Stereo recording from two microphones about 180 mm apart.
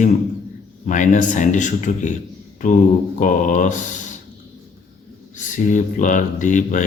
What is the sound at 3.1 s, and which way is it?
Speech, 45° left (ahead or behind).